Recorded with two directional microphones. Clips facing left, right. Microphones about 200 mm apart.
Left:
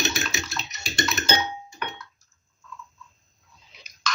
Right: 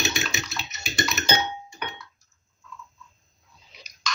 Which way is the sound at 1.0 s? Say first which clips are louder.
Even; centre (ahead or behind).